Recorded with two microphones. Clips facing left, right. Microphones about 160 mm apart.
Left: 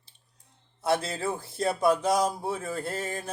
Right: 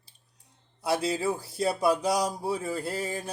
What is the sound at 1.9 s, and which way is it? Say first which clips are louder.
Mantra: left 3 dB; 35° right (ahead or behind).